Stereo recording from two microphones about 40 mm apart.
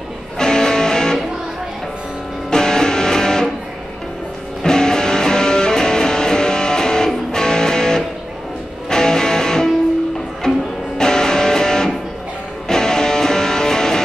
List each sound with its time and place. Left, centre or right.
0.4 s music: centre
2.5 s music: centre
4.6 s music: centre